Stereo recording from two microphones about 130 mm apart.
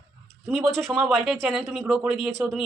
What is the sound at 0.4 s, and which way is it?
Speech, centre (ahead or behind).